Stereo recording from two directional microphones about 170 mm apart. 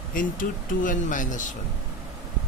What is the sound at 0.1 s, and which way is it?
Speech, 50° left (ahead or behind).